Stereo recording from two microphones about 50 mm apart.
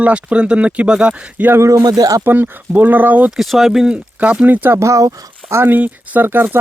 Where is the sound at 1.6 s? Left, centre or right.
Right.